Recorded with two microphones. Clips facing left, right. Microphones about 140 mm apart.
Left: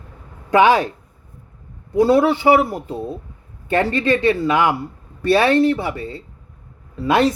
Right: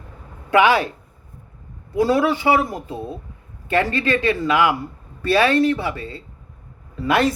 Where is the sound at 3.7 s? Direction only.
20° left (ahead or behind).